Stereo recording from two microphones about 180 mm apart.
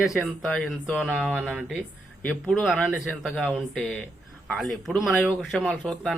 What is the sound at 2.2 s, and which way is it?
Speech, centre (ahead or behind).